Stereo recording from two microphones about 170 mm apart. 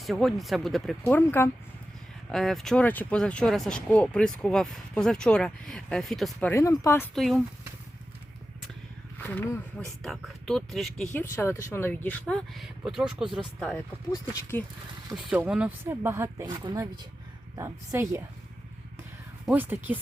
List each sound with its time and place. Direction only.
0.0 s speech: centre (ahead or behind)
1.0 s speech: 10° left (ahead or behind)
2.3 s speech: centre (ahead or behind)
6.5 s speech: 15° left (ahead or behind)
7.1 s speech: centre (ahead or behind)
9.2 s speech: 15° left (ahead or behind)
10.0 s speech: 5° left (ahead or behind)
12.3 s speech: centre (ahead or behind)
14.1 s speech: 20° left (ahead or behind)
15.1 s speech: 5° right (ahead or behind)
17.5 s speech: 15° right (ahead or behind)
19.5 s speech: 10° right (ahead or behind)